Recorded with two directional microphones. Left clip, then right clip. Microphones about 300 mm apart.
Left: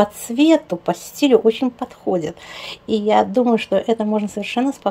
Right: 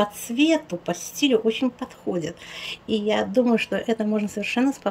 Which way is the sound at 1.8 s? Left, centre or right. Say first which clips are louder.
Left 7 dB; left.